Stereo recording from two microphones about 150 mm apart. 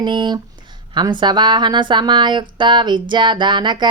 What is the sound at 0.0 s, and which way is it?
Speech, 30° right (ahead or behind).